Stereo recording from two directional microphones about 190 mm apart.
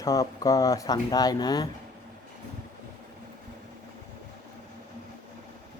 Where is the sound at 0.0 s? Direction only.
20° left (ahead or behind).